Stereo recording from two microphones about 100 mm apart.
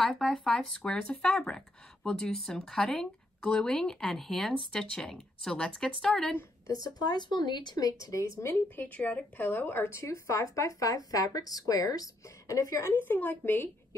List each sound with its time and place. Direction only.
0.2 s speech: 5° left (ahead or behind)
6.7 s a woman's voice: 40° left (ahead or behind)
12.8 s a woman's voice: 20° left (ahead or behind)